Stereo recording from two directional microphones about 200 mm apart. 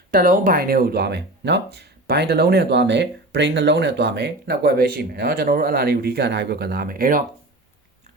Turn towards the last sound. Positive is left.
turn(degrees=-45)  # may be behind; listen again after turning